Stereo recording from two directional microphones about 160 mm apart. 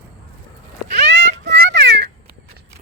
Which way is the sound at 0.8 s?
90° right.